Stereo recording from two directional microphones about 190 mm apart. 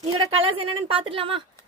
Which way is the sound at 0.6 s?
30° right (ahead or behind).